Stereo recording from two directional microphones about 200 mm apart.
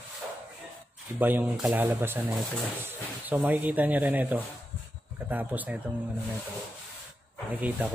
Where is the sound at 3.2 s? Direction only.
10° right (ahead or behind).